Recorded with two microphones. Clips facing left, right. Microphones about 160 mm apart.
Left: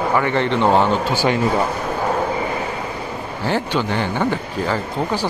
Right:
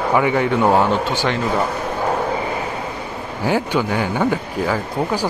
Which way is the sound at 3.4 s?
10° right (ahead or behind).